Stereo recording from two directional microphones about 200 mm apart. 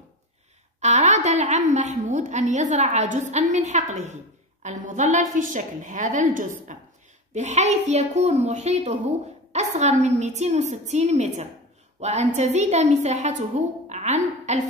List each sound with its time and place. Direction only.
0.7 s a woman's voice: 35° right (ahead or behind)